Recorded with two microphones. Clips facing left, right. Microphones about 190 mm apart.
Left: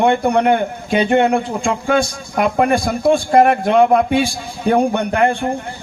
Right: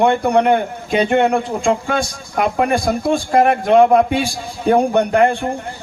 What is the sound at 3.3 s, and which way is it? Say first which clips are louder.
Speech: left 1 dB; 35° left (ahead or behind).